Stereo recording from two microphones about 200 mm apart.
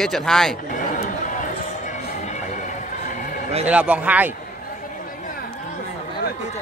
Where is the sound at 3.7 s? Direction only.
5° right (ahead or behind).